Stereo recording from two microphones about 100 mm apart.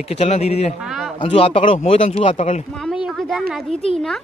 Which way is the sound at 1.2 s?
65° left (ahead or behind).